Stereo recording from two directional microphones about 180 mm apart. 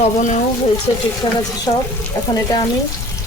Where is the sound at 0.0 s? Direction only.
40° left (ahead or behind).